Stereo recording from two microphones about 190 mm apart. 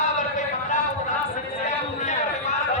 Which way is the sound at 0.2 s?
40° left (ahead or behind).